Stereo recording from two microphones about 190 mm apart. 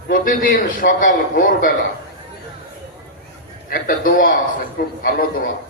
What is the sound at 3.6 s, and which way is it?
A man's voice, 50° left (ahead or behind).